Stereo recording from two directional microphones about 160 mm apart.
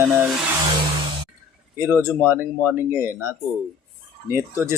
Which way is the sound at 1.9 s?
15° right (ahead or behind).